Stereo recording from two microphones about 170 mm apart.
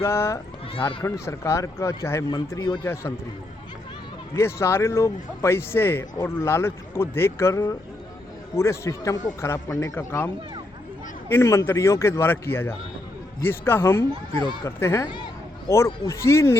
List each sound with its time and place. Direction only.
0.0 s speech: 15° left (ahead or behind)
2.8 s speech: 15° left (ahead or behind)
4.4 s speech: 15° left (ahead or behind)
15.0 s a sound: 25° left (ahead or behind)
16.0 s speech: 15° left (ahead or behind)